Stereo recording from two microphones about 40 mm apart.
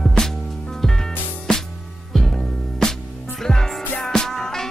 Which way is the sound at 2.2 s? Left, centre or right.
Centre.